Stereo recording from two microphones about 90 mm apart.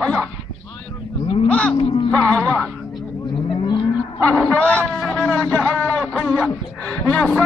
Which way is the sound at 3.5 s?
60° left (ahead or behind).